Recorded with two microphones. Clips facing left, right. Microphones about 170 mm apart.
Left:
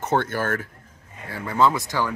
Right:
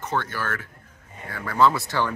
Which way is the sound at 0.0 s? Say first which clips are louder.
Left 5 dB; 50° left (ahead or behind).